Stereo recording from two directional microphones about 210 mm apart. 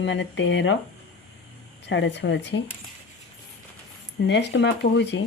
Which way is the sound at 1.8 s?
55° left (ahead or behind).